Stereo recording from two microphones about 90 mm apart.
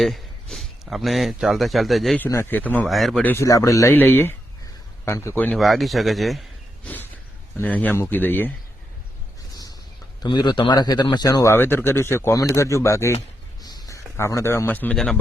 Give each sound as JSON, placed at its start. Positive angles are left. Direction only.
{"t": 0.0, "sound": "speech", "side_deg": 0}
{"t": 2.3, "sound": "a man's voice", "side_deg": 25}
{"t": 2.8, "sound": "speech", "side_deg": 0}
{"t": 3.3, "sound": "speech", "side_deg": 35}
{"t": 3.9, "sound": "a man's voice", "side_deg": 25}
{"t": 5.5, "sound": "speech", "side_deg": 0}
{"t": 6.8, "sound": "a sound", "side_deg": 20}
{"t": 7.5, "sound": "a man's voice", "side_deg": 20}
{"t": 10.3, "sound": "speech", "side_deg": 55}
{"t": 11.4, "sound": "speech", "side_deg": 25}
{"t": 13.6, "sound": "a sound", "side_deg": 45}
{"t": 14.9, "sound": "speech", "side_deg": 5}